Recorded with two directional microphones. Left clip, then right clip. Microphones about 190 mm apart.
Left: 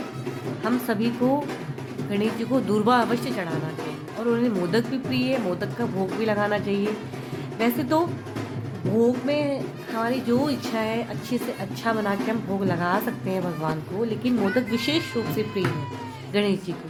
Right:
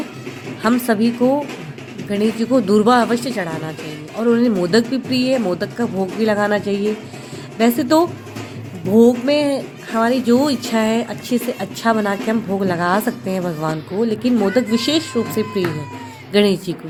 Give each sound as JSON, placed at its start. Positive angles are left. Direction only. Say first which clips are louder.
{"t": 0.9, "sound": "speech", "louder": "right 7 dB", "side_deg": -35}